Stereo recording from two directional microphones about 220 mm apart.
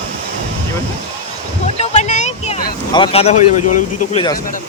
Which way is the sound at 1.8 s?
30° left (ahead or behind).